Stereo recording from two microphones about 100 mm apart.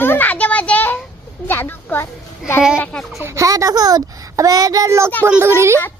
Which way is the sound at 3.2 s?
30° right (ahead or behind).